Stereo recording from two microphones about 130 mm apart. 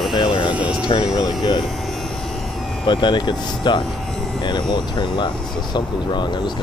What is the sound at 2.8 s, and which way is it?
Speech, 35° left (ahead or behind).